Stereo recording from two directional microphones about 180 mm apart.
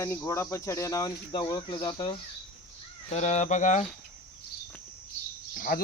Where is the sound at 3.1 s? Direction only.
40° left (ahead or behind).